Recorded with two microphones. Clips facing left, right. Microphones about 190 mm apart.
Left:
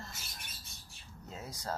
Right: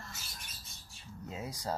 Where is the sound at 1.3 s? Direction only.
10° right (ahead or behind).